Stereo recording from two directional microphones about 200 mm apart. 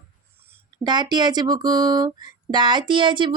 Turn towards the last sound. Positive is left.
turn(degrees=-25)  # may be behind; listen again after turning